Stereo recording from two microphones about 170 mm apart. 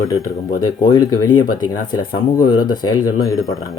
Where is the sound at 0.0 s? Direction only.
20° left (ahead or behind).